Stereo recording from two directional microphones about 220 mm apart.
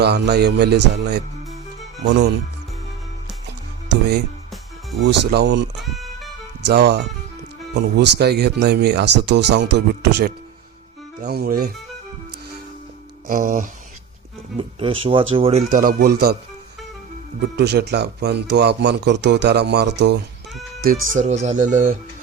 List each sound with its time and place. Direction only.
0.0 s speech: 50° right (ahead or behind)
4.9 s speech: 50° right (ahead or behind)
5.8 s music: centre (ahead or behind)
6.7 s speech: 50° right (ahead or behind)
13.2 s speech: 40° right (ahead or behind)
14.6 s speech: 25° right (ahead or behind); by 16.4 s 45° right (ahead or behind)
17.6 s speech: 50° right (ahead or behind)
21.1 s speech: 30° right (ahead or behind)